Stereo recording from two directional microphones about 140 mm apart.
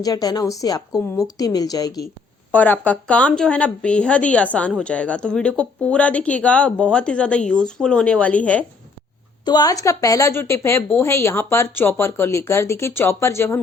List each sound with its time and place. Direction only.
0.0 s speech: 25° left (ahead or behind)
2.5 s speech: 10° left (ahead or behind)
9.4 s speech: 30° left (ahead or behind)